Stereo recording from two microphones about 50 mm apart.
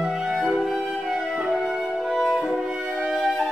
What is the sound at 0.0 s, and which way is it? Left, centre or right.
Music, centre.